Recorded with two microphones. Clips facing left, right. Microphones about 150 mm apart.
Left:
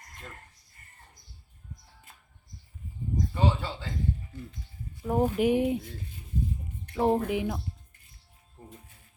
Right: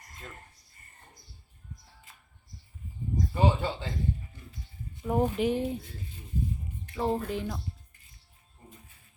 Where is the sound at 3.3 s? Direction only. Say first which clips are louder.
Right 3 dB; 20° right (ahead or behind).